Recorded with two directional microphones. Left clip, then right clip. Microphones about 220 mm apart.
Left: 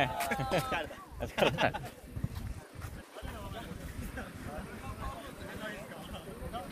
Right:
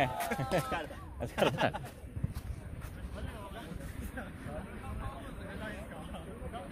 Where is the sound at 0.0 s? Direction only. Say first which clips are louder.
Left 1 dB; 25° right (ahead or behind).